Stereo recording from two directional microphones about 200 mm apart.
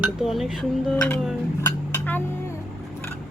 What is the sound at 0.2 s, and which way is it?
Speech, centre (ahead or behind).